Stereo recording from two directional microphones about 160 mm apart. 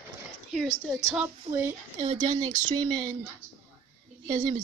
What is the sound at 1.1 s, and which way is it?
Speech, 10° right (ahead or behind).